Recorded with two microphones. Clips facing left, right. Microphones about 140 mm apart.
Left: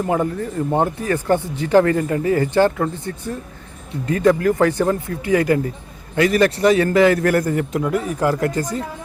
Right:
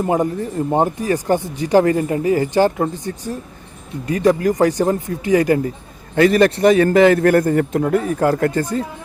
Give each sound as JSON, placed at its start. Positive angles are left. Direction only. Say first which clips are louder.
{"t": 0.0, "sound": "speech", "louder": "right 2 dB", "side_deg": -20}
{"t": 6.6, "sound": "speech", "louder": "right 2 dB", "side_deg": -50}
{"t": 6.8, "sound": "speech", "louder": "right 3 dB", "side_deg": -25}
{"t": 7.2, "sound": "speech", "louder": "right 4 dB", "side_deg": -50}